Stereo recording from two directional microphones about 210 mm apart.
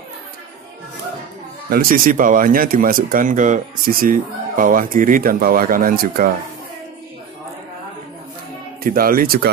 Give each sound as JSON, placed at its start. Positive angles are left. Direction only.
{"t": 1.7, "sound": "speech", "side_deg": -45}
{"t": 8.8, "sound": "speech", "side_deg": -45}